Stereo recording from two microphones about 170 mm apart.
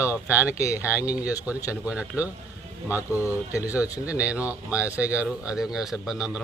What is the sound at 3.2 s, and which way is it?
Speech, 20° left (ahead or behind).